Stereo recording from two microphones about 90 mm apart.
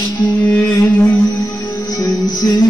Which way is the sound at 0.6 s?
35° left (ahead or behind).